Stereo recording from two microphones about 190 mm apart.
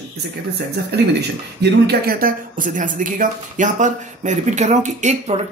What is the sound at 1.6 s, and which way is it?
Speech, 55° right (ahead or behind).